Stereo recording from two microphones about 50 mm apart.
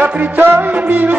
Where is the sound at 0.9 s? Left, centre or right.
Right.